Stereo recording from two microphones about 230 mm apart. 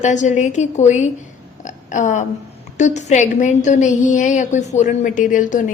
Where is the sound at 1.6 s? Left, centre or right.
Left.